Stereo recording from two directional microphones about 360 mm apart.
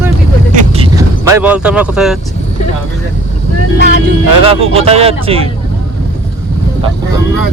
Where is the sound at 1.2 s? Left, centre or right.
Centre.